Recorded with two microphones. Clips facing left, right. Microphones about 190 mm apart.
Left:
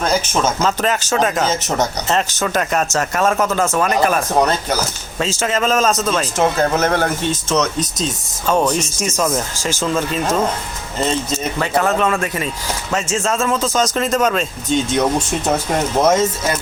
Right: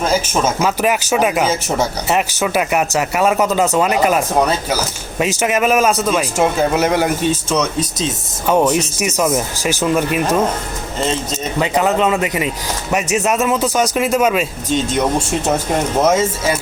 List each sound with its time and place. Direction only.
0.0 s speech: 5° right (ahead or behind)
8.4 s speech: 20° right (ahead or behind)
11.0 s speech: centre (ahead or behind)
11.6 s speech: 15° right (ahead or behind)
16.0 s speech: 5° right (ahead or behind)